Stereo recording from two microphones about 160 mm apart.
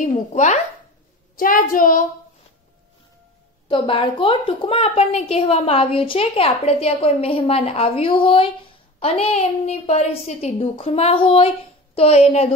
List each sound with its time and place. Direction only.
0.0 s speech: 50° left (ahead or behind)
1.3 s a woman's voice: 60° left (ahead or behind)
3.6 s a woman's voice: 35° left (ahead or behind)